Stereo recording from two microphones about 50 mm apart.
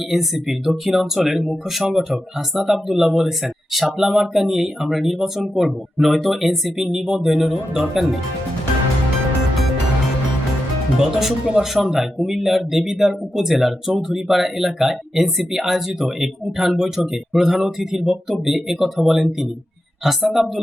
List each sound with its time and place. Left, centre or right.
0.1 s speech: centre
10.9 s speech: centre